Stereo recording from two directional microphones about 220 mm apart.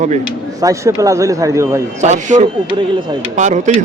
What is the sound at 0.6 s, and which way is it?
Speech, 15° right (ahead or behind).